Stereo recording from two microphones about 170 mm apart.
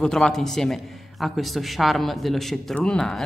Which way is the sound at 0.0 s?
5° left (ahead or behind).